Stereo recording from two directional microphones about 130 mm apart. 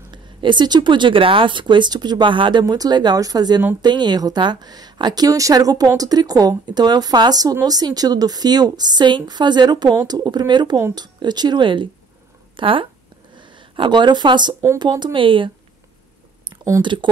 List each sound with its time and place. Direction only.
0.1 s a woman's voice: 35° right (ahead or behind)
14.5 s speech: 20° right (ahead or behind)
14.8 s a woman's voice: 35° right (ahead or behind)
16.8 s a woman's voice: 35° right (ahead or behind)